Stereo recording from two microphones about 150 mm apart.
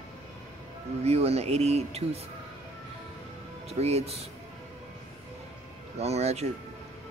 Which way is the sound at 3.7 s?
45° right (ahead or behind).